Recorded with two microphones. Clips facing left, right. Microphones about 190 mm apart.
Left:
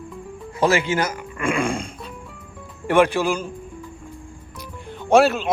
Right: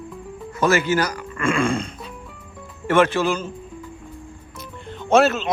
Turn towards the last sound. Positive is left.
turn(degrees=10)  # may be behind; listen again after turning